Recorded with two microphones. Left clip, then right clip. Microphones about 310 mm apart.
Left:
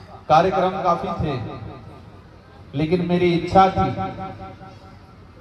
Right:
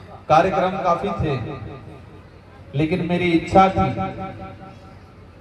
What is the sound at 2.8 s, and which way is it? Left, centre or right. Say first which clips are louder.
A man's voice: left 1 dB; left.